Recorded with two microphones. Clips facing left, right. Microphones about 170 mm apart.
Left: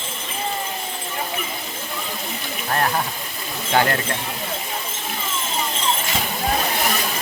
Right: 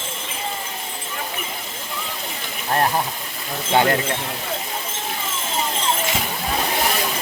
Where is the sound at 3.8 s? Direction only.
20° right (ahead or behind).